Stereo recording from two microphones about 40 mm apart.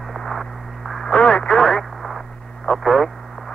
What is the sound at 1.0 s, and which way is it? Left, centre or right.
Radio, left.